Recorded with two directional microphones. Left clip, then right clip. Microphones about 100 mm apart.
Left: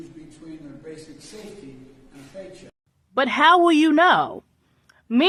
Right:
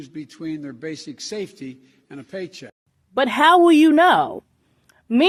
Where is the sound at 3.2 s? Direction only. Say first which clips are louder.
Right 2 dB; 35° right (ahead or behind).